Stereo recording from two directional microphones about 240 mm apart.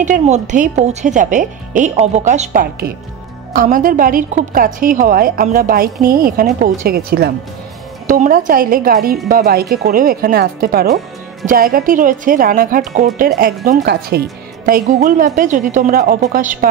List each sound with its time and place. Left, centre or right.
0.0 s a woman's voice: right